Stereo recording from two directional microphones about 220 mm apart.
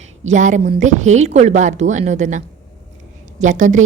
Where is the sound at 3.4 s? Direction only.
35° right (ahead or behind).